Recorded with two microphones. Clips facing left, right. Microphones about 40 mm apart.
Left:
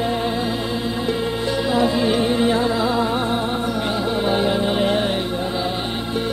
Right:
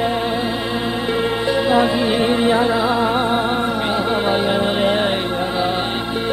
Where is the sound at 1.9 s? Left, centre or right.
Right.